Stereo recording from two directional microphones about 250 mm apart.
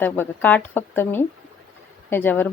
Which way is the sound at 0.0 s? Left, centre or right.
Centre.